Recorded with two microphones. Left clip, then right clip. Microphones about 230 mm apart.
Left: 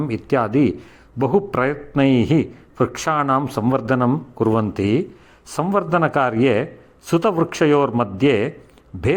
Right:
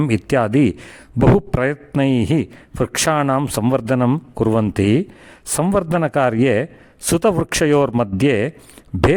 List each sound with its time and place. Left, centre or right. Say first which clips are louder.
0.0 s a man's voice: right 2 dB; right
3.4 s a man's voice: right 1 dB; right